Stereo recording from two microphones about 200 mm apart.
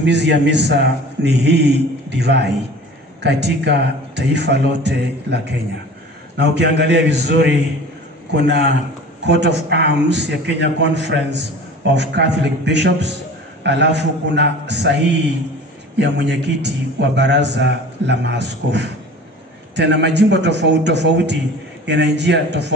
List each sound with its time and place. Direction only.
0.0 s a man's voice: 60° right (ahead or behind)
16.0 s a man's voice: 60° right (ahead or behind)